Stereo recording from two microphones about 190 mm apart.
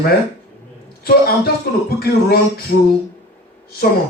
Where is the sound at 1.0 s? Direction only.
55° left (ahead or behind).